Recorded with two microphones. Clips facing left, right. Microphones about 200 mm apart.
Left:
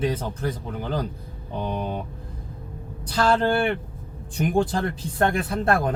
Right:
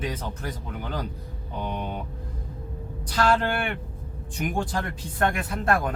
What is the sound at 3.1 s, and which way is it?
Speech, 30° left (ahead or behind).